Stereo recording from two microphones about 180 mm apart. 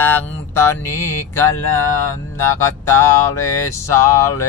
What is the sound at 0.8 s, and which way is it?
Speech, 15° left (ahead or behind).